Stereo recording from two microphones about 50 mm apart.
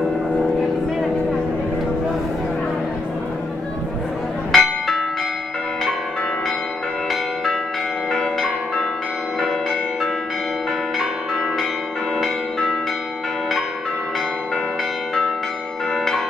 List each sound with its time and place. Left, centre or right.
4.5 s church bell: centre
8.1 s change ringing: centre